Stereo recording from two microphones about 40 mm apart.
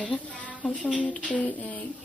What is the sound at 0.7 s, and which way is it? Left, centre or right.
Speech, left.